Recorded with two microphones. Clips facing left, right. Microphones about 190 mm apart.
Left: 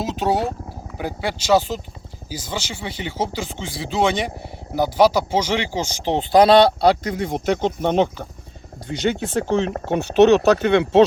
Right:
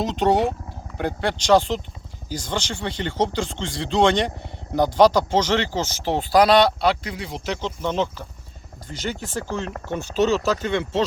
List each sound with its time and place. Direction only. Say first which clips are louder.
0.0 s speech: right 2 dB; 5° left (ahead or behind); by 6.9 s 30° left (ahead or behind)
7.0 s speech: left 8 dB; 45° left (ahead or behind); by 11.0 s 65° left (ahead or behind)